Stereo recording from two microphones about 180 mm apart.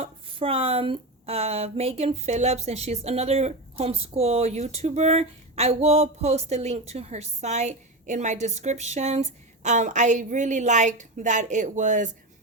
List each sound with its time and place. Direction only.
0.0 s speech: 30° right (ahead or behind)